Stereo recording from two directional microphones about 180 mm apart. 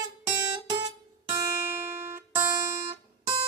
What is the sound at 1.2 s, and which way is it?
Music, 15° right (ahead or behind).